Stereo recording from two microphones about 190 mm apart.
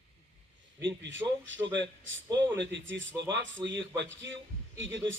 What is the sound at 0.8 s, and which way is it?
A man's voice, 75° right (ahead or behind).